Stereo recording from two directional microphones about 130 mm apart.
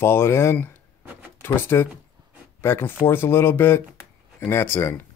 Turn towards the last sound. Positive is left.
turn(degrees=15)  # may be behind; listen again after turning